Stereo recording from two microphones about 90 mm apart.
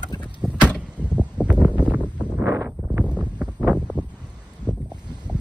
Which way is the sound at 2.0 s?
15° left (ahead or behind).